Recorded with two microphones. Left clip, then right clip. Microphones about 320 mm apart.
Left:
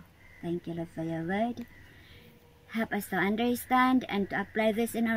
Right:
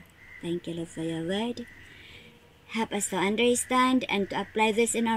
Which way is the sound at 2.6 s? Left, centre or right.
Right.